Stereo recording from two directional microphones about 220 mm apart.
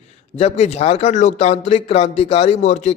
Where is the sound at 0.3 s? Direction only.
30° left (ahead or behind).